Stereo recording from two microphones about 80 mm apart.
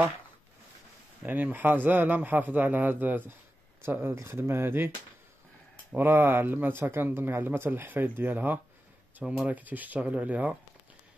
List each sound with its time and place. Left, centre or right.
1.2 s speech: right
5.9 s speech: right